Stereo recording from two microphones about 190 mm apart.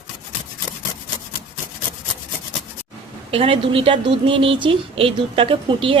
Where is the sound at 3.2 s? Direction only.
30° right (ahead or behind).